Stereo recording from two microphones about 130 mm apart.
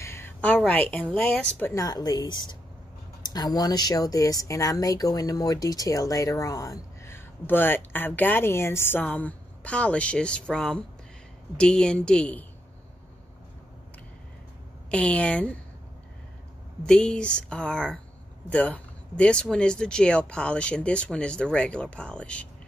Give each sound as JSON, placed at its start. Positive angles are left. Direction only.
{"t": 0.0, "sound": "speech", "side_deg": 20}
{"t": 1.7, "sound": "a woman's voice", "side_deg": 30}
{"t": 14.9, "sound": "speech", "side_deg": 10}
{"t": 16.8, "sound": "speech", "side_deg": 5}